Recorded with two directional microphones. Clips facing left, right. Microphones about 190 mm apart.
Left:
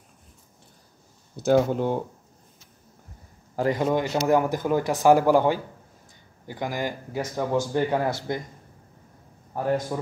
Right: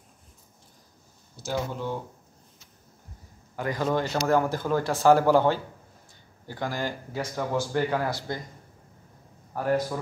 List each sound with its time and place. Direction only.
1.4 s speech: 50° left (ahead or behind)
3.5 s speech: 25° left (ahead or behind)
9.5 s a man's voice: 20° left (ahead or behind)